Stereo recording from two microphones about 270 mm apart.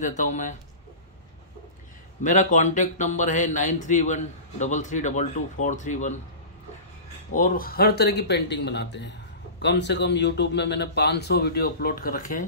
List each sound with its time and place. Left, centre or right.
0.0 s speech: left
2.2 s speech: left
7.3 s a man's voice: left